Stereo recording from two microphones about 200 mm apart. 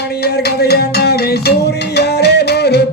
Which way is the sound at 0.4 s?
55° left (ahead or behind).